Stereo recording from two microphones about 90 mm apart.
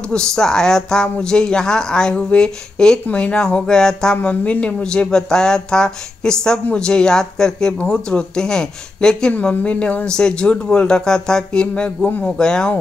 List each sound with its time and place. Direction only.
0.1 s speech: 10° left (ahead or behind)